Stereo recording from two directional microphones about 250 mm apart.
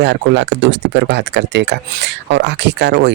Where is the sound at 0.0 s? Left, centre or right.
Right.